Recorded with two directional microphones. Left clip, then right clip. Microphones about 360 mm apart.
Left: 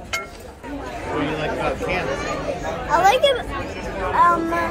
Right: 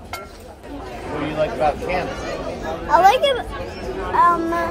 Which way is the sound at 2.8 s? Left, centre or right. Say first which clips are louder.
Right 2 dB; centre.